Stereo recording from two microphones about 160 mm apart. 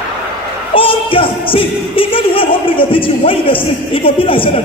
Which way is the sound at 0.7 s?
35° left (ahead or behind).